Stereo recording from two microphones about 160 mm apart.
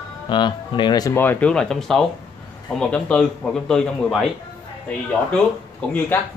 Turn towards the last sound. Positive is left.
turn(degrees=10)  # may be behind; listen again after turning